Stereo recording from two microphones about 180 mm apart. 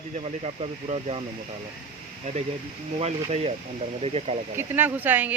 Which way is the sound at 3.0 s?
35° right (ahead or behind).